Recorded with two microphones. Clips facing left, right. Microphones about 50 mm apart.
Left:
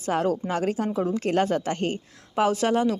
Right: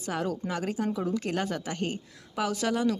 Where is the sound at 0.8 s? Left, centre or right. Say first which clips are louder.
Left 4 dB; left.